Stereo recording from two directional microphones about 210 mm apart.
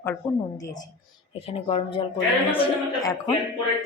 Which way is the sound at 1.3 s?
25° left (ahead or behind).